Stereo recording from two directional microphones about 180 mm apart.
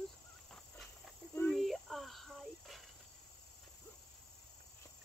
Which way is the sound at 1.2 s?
15° right (ahead or behind).